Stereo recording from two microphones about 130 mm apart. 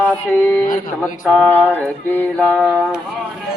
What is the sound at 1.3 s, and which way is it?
Mantra, 5° left (ahead or behind).